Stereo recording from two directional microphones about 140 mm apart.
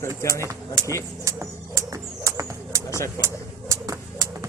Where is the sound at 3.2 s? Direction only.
20° right (ahead or behind).